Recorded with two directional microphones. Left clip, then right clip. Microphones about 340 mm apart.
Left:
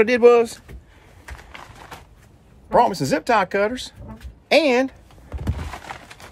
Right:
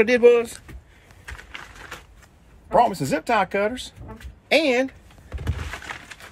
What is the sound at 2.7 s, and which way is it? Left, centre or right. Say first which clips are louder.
Speech: left 2 dB; centre.